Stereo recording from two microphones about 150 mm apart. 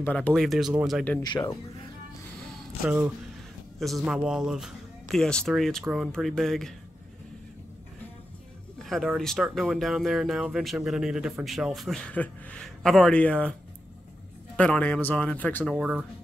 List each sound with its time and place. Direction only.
0.0 s speech: 10° left (ahead or behind)
1.2 s speech: 30° left (ahead or behind)
2.8 s speech: 15° right (ahead or behind); by 6.7 s 5° left (ahead or behind)
8.7 s speech: centre (ahead or behind)
14.6 s speech: 10° left (ahead or behind)
15.7 s speech: 5° right (ahead or behind)